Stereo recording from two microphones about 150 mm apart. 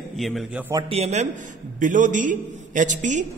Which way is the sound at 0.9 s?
45° right (ahead or behind).